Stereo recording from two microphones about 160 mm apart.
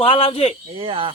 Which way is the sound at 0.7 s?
30° right (ahead or behind).